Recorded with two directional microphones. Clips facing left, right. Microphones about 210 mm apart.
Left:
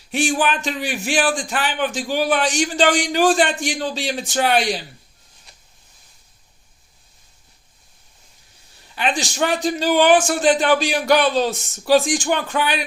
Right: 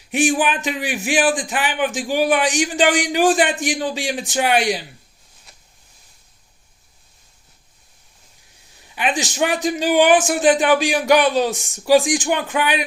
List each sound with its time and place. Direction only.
0.1 s a man's voice: 15° right (ahead or behind)
9.0 s a man's voice: 15° right (ahead or behind)